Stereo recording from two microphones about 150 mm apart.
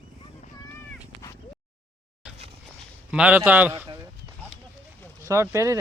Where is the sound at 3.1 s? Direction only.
10° right (ahead or behind).